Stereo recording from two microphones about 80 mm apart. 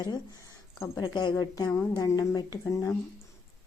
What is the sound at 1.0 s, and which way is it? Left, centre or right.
Speech, left.